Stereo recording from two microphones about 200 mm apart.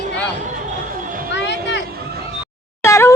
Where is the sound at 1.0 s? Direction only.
45° right (ahead or behind).